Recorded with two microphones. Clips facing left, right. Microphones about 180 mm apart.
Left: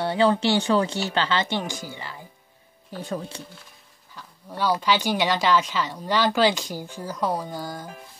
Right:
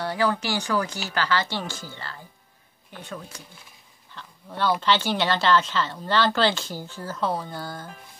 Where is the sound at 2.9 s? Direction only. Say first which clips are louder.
Left 7 dB; 35° left (ahead or behind).